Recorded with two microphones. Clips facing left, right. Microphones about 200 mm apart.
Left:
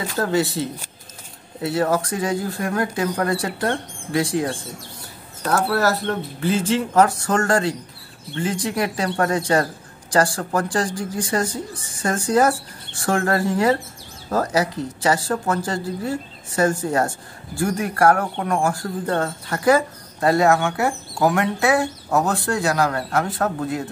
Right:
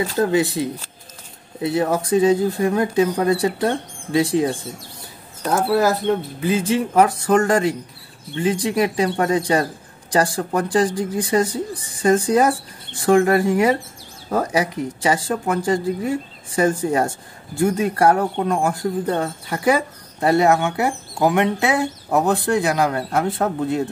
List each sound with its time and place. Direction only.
0.2 s speech: 20° right (ahead or behind)
1.6 s speech: 20° right (ahead or behind)